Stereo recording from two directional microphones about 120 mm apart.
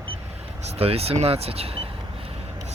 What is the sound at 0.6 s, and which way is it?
Speech, 55° right (ahead or behind).